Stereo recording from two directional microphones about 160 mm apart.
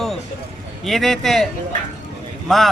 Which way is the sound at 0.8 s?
Centre (ahead or behind).